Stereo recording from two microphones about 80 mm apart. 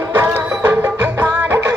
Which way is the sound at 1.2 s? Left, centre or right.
Right.